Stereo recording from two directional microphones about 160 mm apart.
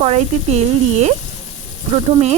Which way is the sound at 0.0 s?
45° right (ahead or behind).